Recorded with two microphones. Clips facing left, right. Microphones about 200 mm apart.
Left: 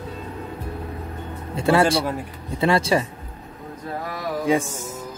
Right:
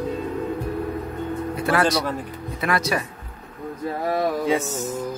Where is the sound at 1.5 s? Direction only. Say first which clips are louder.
Left 4 dB; 25° left (ahead or behind).